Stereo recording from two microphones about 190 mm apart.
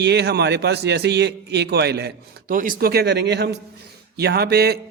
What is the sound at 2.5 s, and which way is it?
A man's voice, 45° right (ahead or behind).